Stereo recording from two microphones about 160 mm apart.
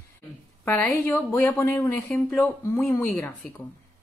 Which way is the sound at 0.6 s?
10° left (ahead or behind).